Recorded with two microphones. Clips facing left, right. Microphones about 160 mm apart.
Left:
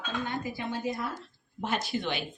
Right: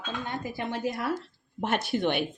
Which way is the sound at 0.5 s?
70° right (ahead or behind).